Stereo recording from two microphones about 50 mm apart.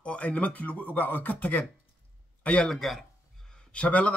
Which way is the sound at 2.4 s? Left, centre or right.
Left.